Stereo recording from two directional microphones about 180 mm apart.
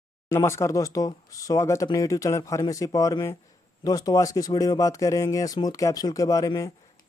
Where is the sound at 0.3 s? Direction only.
15° left (ahead or behind).